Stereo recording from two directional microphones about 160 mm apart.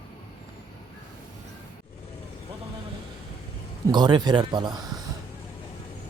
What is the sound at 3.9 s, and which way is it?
Speech, 30° right (ahead or behind).